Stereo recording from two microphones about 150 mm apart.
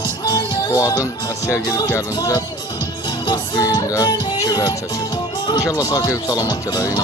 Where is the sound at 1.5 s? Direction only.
20° left (ahead or behind).